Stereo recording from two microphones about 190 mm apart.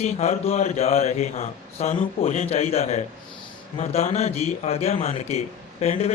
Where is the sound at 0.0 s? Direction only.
35° left (ahead or behind).